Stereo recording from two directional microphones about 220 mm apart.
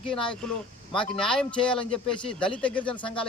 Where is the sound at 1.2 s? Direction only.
5° left (ahead or behind).